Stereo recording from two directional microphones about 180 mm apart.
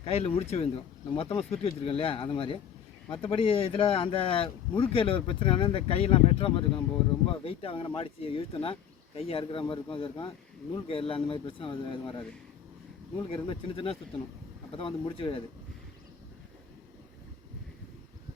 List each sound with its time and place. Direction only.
0.0 s speech: 35° left (ahead or behind)